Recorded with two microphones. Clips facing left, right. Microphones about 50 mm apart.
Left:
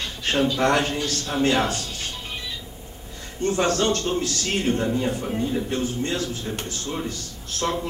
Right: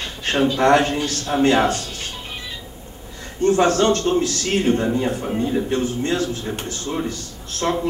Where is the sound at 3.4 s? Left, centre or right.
Right.